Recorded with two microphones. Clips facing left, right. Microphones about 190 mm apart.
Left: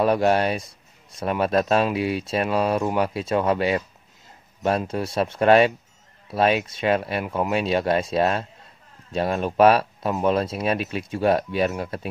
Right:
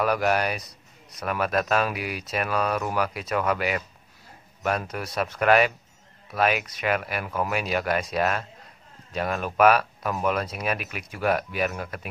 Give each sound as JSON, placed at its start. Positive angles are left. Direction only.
{"t": 0.0, "sound": "a man's voice", "side_deg": 30}